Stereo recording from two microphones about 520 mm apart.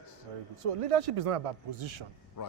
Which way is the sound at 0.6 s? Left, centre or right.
Right.